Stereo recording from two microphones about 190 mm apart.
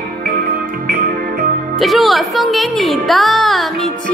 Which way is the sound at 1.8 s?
Centre (ahead or behind).